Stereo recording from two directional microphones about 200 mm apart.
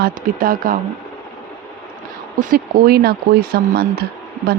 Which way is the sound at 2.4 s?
45° right (ahead or behind).